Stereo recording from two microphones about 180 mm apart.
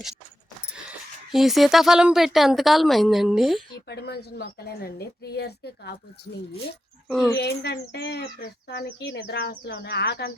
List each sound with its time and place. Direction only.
0.7 s speech: 5° right (ahead or behind)
3.8 s a woman's voice: 65° left (ahead or behind)
7.3 s speech: 70° left (ahead or behind)